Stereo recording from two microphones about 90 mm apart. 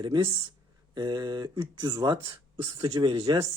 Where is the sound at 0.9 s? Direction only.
50° right (ahead or behind).